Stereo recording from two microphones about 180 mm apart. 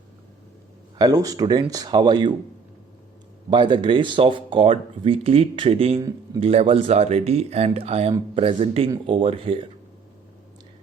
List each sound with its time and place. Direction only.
0.9 s speech: 20° right (ahead or behind)
3.5 s speech: 25° right (ahead or behind)
6.0 s speech: 20° right (ahead or behind)
6.4 s speech: 35° right (ahead or behind)